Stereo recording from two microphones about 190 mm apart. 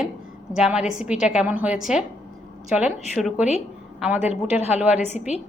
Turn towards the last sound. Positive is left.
turn(degrees=35)  # may be behind; listen again after turning